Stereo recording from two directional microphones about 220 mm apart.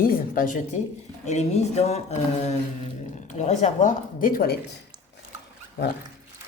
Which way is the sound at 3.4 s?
30° left (ahead or behind).